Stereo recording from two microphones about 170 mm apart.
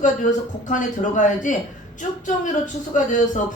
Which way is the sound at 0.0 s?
45° left (ahead or behind).